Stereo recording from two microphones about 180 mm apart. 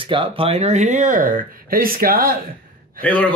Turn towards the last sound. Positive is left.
turn(degrees=-55)  # may be behind; listen again after turning